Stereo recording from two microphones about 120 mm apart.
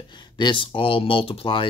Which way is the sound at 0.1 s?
40° left (ahead or behind).